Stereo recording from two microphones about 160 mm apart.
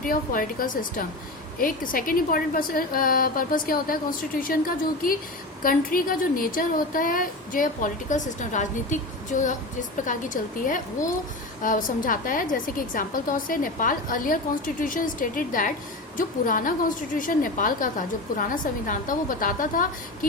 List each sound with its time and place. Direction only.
0.0 s a woman's voice: 60° left (ahead or behind)
5.6 s a woman's voice: 60° left (ahead or behind)